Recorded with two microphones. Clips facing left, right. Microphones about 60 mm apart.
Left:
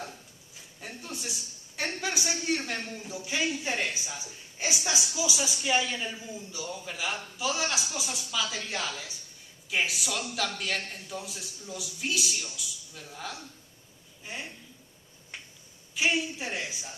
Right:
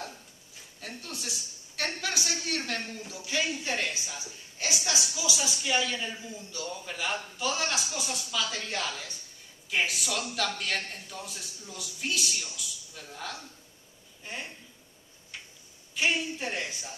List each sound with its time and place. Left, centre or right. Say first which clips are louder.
0.7 s a man's voice: left 1 dB; centre
6.7 s a man's voice: right 1 dB; centre
15.9 s a man's voice: left 1 dB; centre